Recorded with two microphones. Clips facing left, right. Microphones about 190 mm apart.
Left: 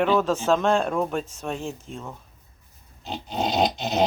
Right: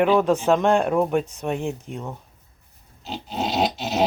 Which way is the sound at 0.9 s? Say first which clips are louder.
Right 5 dB; 5° right (ahead or behind).